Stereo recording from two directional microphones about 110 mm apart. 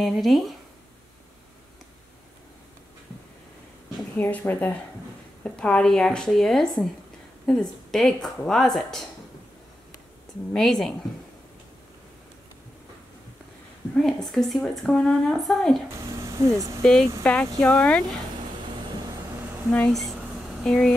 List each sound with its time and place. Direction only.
0.0 s a woman's voice: centre (ahead or behind)
4.2 s a woman's voice: 15° left (ahead or behind)
10.5 s a woman's voice: 5° left (ahead or behind)
13.9 s a woman's voice: centre (ahead or behind)
16.3 s speech: 30° right (ahead or behind)
16.8 s a woman's voice: 5° left (ahead or behind)
19.9 s a woman's voice: centre (ahead or behind)